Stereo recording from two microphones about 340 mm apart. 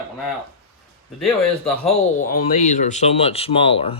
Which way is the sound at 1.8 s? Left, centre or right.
Left.